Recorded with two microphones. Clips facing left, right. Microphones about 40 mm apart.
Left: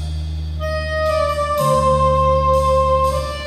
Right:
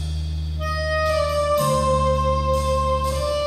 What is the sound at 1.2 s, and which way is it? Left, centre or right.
Music, centre.